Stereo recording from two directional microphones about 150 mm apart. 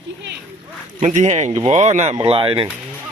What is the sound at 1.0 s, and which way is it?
Speech, 50° right (ahead or behind).